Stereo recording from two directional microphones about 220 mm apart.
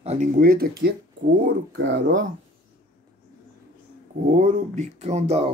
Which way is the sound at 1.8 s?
55° right (ahead or behind).